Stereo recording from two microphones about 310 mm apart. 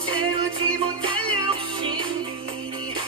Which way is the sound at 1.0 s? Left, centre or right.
Centre.